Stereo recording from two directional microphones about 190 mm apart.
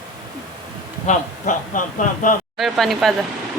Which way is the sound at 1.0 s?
40° left (ahead or behind).